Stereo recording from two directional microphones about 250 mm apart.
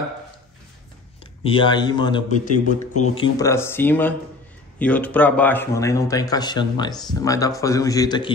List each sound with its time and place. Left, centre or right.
1.4 s a man's voice: centre
2.5 s speech: left
3.2 s speech: centre